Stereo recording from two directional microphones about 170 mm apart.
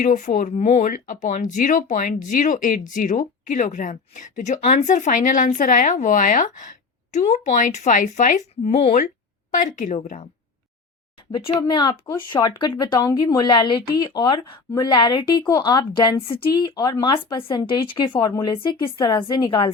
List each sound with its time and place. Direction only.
0.0 s speech: 45° left (ahead or behind)
11.3 s speech: 30° left (ahead or behind)